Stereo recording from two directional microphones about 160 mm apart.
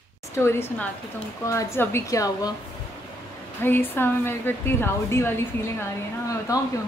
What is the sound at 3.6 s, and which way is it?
A woman's voice, 15° left (ahead or behind).